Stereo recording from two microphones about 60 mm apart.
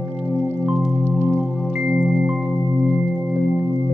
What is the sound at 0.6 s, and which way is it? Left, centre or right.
Music, right.